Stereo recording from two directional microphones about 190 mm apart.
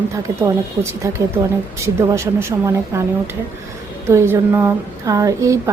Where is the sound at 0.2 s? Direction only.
15° right (ahead or behind).